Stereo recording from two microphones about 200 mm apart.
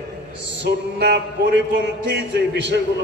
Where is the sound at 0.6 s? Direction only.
60° right (ahead or behind).